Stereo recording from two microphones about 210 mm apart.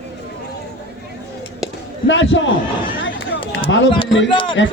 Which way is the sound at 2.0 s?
60° left (ahead or behind).